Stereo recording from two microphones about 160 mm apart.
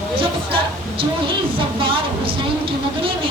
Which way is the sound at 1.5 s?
35° right (ahead or behind).